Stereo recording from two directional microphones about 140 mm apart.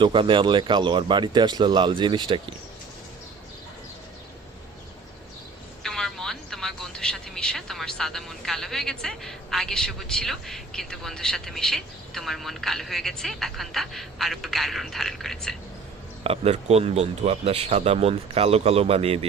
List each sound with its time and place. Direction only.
0.0 s speech: 35° right (ahead or behind)
5.8 s speech: 5° left (ahead or behind)
16.2 s a man's voice: 45° right (ahead or behind)